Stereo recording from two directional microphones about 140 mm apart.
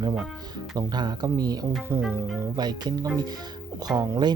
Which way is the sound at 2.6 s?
30° right (ahead or behind).